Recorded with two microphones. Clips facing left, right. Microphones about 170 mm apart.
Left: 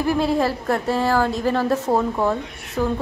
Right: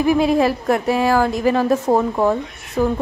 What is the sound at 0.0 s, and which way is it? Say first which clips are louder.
A woman's voice: right 4 dB; 15° right (ahead or behind).